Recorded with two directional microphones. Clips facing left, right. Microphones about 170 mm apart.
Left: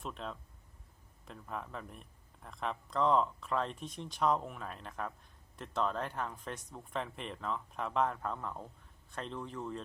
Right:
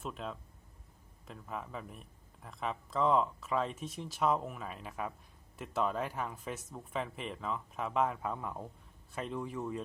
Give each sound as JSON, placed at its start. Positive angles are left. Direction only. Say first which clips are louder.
{"t": 0.0, "sound": "a man's voice", "louder": "right 1 dB", "side_deg": -5}